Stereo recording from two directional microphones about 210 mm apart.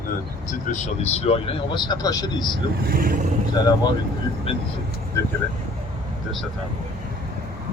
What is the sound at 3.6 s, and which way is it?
Speech, 20° left (ahead or behind).